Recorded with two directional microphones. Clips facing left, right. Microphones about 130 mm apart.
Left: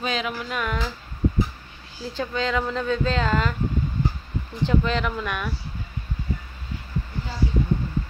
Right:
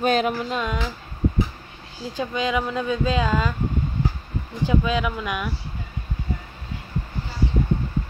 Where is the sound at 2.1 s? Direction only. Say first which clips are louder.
Right 1 dB; 15° right (ahead or behind).